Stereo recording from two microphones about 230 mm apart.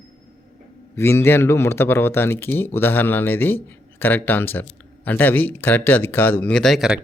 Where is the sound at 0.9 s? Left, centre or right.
Centre.